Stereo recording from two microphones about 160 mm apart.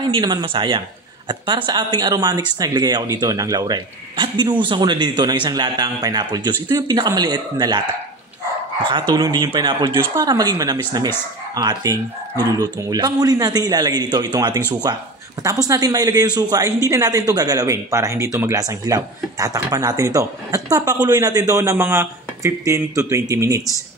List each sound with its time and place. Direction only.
0.1 s speech: 25° right (ahead or behind)
9.1 s speech: 25° right (ahead or behind)